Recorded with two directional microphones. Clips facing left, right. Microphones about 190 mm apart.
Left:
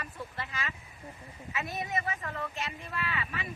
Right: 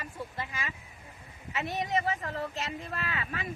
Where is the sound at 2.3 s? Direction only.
35° right (ahead or behind).